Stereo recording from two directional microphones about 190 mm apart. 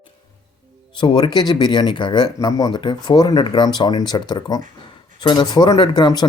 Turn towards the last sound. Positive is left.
turn(degrees=20)  # may be behind; listen again after turning